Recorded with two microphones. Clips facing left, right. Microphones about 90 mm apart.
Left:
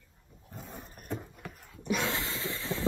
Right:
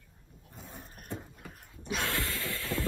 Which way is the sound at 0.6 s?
50° left (ahead or behind).